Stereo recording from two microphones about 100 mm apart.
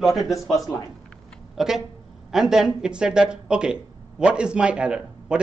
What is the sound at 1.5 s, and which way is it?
A man's voice, 5° right (ahead or behind).